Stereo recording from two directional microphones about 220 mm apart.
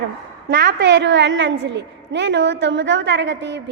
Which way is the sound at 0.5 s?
45° right (ahead or behind).